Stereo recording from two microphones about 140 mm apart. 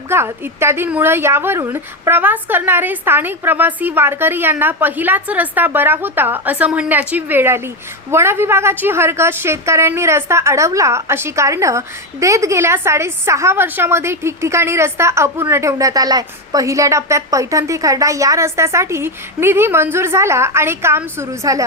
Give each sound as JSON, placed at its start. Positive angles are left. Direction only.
{"t": 0.1, "sound": "a woman's voice", "side_deg": -15}